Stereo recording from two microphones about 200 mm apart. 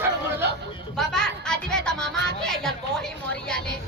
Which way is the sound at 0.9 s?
5° left (ahead or behind).